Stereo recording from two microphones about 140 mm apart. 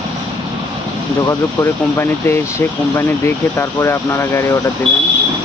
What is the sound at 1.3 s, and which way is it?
Speech, 20° left (ahead or behind).